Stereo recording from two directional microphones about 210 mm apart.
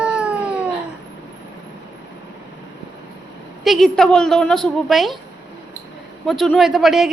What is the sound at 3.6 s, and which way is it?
A woman's voice, centre (ahead or behind).